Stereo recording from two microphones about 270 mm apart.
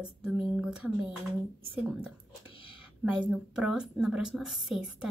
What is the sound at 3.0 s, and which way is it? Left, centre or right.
A woman's voice, centre.